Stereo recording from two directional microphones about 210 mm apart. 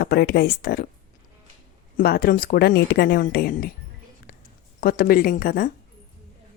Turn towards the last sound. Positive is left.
turn(degrees=45)  # may be behind; listen again after turning